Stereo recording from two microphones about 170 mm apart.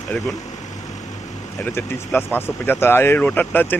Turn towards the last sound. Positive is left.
turn(degrees=10)  # may be behind; listen again after turning